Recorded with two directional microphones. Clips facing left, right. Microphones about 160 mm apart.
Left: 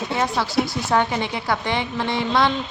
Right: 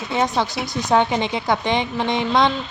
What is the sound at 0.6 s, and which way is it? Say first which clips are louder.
A woman's voice: right 4 dB; 20° right (ahead or behind).